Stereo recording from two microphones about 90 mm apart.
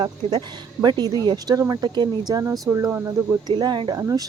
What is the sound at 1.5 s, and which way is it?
Speech, 45° right (ahead or behind).